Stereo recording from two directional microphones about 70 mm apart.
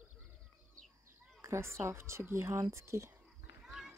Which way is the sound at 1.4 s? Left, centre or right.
Right.